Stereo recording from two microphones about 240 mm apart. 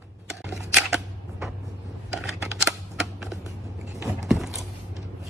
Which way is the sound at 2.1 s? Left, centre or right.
Centre.